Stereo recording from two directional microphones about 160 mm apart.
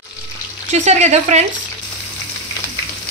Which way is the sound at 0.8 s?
45° right (ahead or behind).